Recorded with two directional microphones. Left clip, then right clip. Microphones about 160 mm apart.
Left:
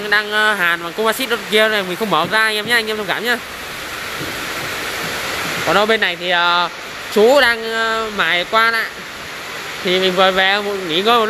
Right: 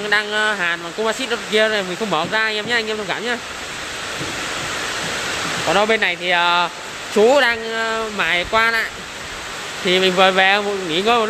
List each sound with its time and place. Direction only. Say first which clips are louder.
0.1 s speech: left 3 dB; 5° right (ahead or behind)
5.7 s speech: left 2 dB; centre (ahead or behind)
9.8 s speech: even; 15° right (ahead or behind)